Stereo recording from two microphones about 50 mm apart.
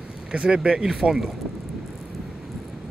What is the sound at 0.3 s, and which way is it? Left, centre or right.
Speech, right.